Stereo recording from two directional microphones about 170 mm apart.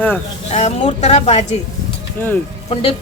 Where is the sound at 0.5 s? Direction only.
40° left (ahead or behind).